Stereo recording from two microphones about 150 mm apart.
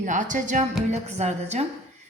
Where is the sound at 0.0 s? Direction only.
55° right (ahead or behind).